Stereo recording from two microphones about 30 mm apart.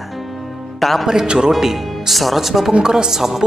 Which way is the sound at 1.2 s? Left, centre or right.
Right.